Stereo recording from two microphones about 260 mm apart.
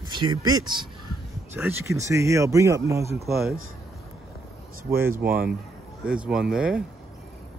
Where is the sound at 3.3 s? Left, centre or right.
Centre.